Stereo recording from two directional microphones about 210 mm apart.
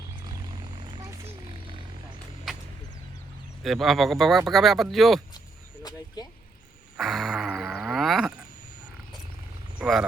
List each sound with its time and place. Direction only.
0.2 s vehicle: 20° right (ahead or behind)
3.6 s speech: centre (ahead or behind)
6.9 s a sound: centre (ahead or behind)
9.7 s speech: 5° right (ahead or behind)